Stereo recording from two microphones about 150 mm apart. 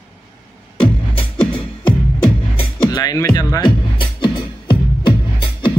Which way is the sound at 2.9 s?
25° left (ahead or behind).